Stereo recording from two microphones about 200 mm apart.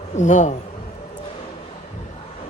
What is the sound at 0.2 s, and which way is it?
Speech, 35° left (ahead or behind).